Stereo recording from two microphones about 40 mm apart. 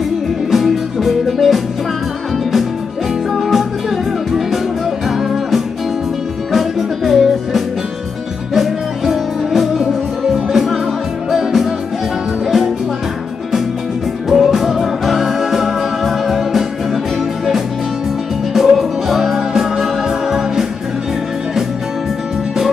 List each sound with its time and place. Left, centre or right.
0.5 s music: centre
3.3 s music: centre
14.3 s music: centre
18.5 s music: centre